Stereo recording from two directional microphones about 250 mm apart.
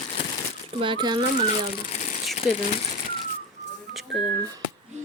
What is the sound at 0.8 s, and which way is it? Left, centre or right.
Speech, centre.